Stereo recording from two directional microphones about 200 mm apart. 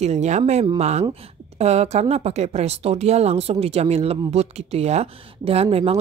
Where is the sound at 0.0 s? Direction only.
35° right (ahead or behind).